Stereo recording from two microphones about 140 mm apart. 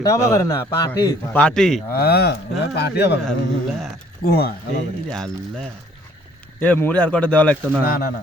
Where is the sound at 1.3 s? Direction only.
10° left (ahead or behind).